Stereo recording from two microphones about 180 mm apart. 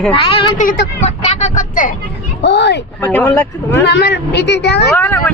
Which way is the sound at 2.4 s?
70° left (ahead or behind).